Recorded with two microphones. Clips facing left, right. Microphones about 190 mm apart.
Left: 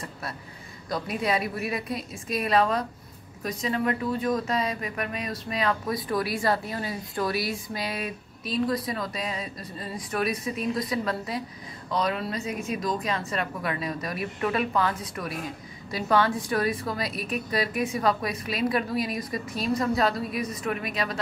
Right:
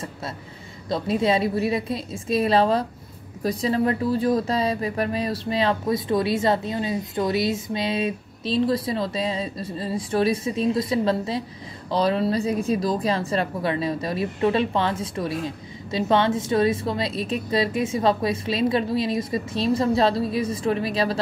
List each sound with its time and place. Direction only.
0.8 s speech: 25° right (ahead or behind)